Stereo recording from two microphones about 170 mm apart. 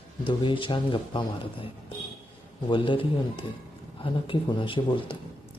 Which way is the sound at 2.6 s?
30° left (ahead or behind).